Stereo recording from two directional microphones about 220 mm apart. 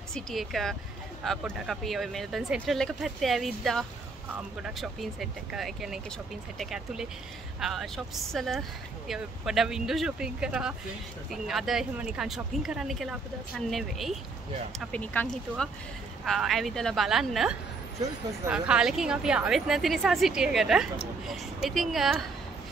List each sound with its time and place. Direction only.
0.1 s speech: centre (ahead or behind)